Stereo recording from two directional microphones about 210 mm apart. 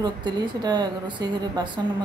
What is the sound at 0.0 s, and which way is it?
A woman's voice, 20° right (ahead or behind).